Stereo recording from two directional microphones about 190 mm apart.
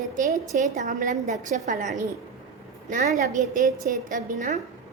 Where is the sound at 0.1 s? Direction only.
40° right (ahead or behind).